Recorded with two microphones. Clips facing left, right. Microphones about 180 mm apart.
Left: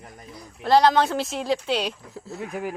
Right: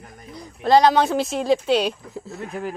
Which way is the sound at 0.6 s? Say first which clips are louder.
Right 2 dB; 15° right (ahead or behind).